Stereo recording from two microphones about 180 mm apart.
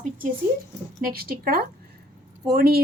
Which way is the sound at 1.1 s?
55° right (ahead or behind).